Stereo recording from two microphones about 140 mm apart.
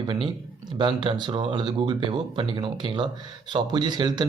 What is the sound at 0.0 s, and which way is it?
Speech, 35° right (ahead or behind).